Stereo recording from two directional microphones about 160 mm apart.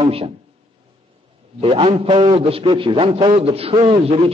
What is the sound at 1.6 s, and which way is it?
A man's voice, 35° right (ahead or behind).